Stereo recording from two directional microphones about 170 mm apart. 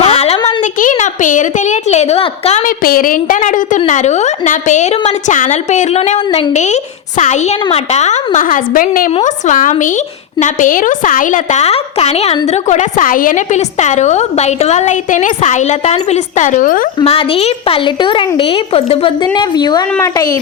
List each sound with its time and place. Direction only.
0.0 s a sound: 35° left (ahead or behind)
0.8 s a woman's voice: 50° left (ahead or behind)
2.6 s a woman's voice: 55° left (ahead or behind)
17.0 s a woman's voice: 35° left (ahead or behind)